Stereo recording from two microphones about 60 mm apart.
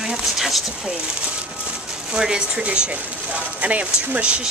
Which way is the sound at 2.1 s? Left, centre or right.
Centre.